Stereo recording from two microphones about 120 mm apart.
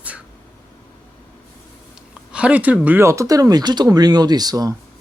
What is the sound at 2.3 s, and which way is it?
Speech, 10° right (ahead or behind).